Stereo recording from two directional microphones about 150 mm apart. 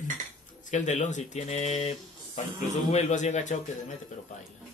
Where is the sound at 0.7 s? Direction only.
55° left (ahead or behind).